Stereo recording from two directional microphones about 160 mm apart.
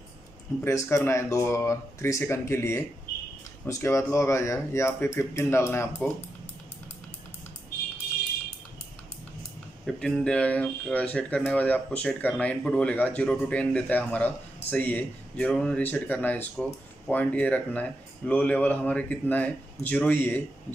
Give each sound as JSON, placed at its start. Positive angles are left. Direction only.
{"t": 0.7, "sound": "speech", "side_deg": 15}
{"t": 9.8, "sound": "speech", "side_deg": 5}